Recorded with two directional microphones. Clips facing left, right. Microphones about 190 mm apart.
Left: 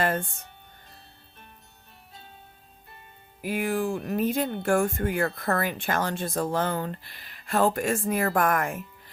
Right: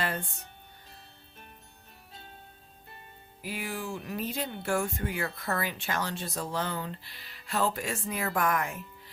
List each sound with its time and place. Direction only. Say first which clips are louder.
0.0 s speech: left 7 dB; 50° left (ahead or behind)
3.4 s speech: left 9 dB; 50° left (ahead or behind)